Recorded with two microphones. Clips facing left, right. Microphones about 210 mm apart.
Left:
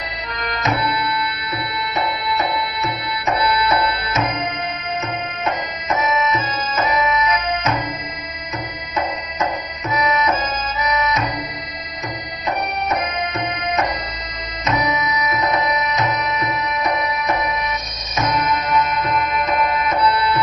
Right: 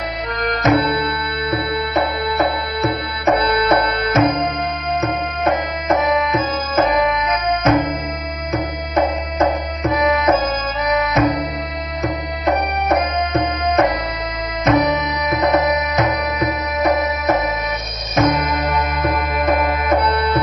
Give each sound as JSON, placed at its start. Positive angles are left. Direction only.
{"t": 0.4, "sound": "music", "side_deg": -50}
{"t": 2.8, "sound": "music", "side_deg": -55}
{"t": 5.5, "sound": "music", "side_deg": -55}
{"t": 9.4, "sound": "music", "side_deg": -55}
{"t": 12.5, "sound": "music", "side_deg": -55}